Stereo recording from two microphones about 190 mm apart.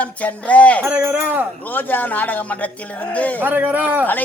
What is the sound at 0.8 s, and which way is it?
Speech, 10° right (ahead or behind).